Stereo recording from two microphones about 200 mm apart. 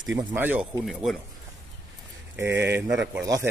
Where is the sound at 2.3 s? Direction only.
10° right (ahead or behind).